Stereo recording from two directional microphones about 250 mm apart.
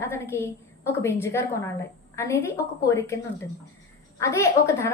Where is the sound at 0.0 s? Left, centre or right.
Centre.